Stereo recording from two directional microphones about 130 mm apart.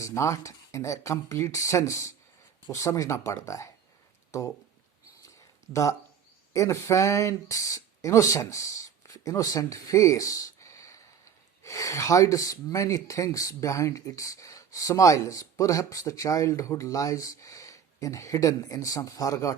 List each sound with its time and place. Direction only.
0.0 s speech: 25° left (ahead or behind)
5.7 s speech: 25° left (ahead or behind)